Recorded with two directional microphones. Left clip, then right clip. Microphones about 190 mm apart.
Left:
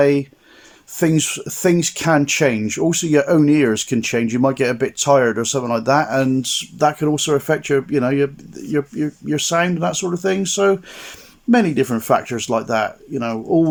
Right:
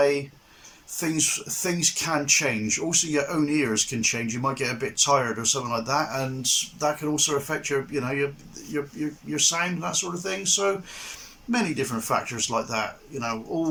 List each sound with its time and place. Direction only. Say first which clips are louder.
0.9 s speech: left 8 dB; 45° left (ahead or behind)